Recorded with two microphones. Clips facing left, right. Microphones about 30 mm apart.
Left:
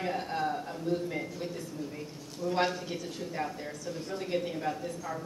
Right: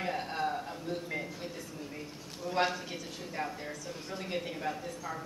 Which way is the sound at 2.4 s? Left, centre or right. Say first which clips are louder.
Left 2 dB; centre.